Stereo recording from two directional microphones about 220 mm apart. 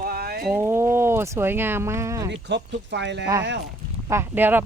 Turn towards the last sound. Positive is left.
turn(degrees=-10)  # may be behind; listen again after turning